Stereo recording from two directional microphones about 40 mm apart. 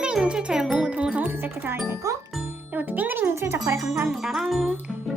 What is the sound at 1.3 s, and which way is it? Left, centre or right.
Speech, right.